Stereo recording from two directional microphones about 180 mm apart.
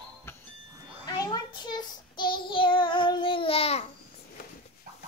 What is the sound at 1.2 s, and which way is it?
Child singing, 25° left (ahead or behind).